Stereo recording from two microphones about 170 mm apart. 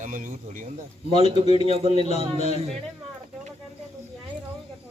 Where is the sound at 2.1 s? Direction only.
40° left (ahead or behind).